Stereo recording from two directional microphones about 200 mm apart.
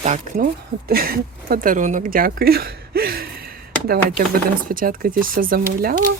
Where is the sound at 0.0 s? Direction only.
40° right (ahead or behind).